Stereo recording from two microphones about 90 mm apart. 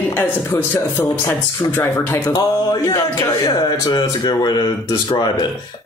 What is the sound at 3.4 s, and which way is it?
Speech, 50° left (ahead or behind).